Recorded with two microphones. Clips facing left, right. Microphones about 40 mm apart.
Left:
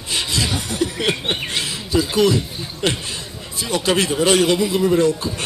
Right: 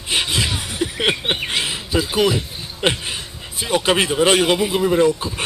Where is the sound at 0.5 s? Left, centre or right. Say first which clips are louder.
Left 2 dB; centre.